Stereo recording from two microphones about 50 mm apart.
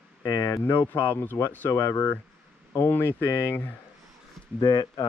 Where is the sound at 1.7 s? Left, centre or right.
Left.